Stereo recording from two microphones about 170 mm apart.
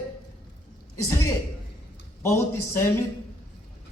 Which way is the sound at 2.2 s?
15° left (ahead or behind).